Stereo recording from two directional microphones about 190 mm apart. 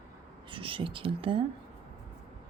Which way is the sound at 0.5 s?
25° right (ahead or behind).